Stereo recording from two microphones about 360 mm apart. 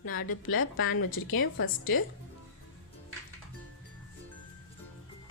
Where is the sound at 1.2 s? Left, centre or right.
Left.